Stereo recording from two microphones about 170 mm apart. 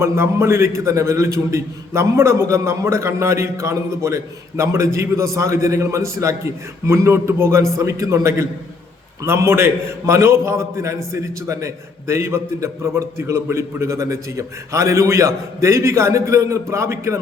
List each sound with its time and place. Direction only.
0.0 s a man's voice: 15° right (ahead or behind)